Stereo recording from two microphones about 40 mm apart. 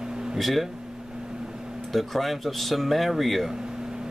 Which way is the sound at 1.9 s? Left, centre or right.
Centre.